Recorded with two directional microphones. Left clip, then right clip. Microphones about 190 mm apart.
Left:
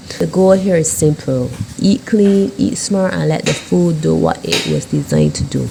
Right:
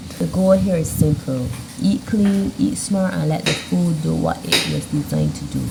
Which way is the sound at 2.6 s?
35° left (ahead or behind).